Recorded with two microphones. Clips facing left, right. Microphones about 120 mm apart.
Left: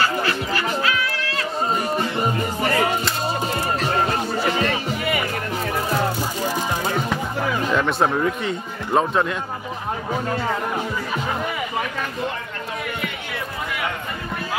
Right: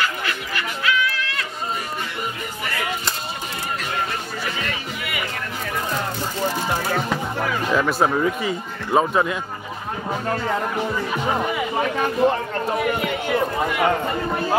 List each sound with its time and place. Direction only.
0.0 s music: 35° left (ahead or behind)
2.6 s music: 35° left (ahead or behind)
4.5 s music: 35° left (ahead or behind)
7.6 s speech: 5° right (ahead or behind)
12.0 s speech: 40° right (ahead or behind)
13.0 s a sound: 35° right (ahead or behind)